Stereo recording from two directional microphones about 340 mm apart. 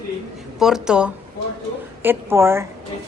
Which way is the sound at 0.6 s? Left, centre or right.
Centre.